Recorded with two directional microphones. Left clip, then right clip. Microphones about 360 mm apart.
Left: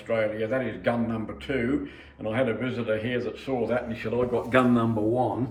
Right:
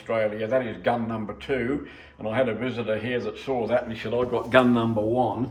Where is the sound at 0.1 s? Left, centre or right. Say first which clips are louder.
Right 2 dB; right.